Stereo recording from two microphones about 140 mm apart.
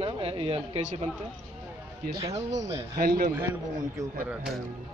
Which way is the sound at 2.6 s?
20° right (ahead or behind).